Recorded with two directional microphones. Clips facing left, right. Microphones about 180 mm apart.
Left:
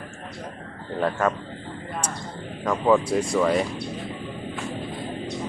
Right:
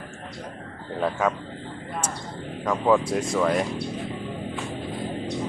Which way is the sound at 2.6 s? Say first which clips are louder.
Left 1 dB; centre (ahead or behind).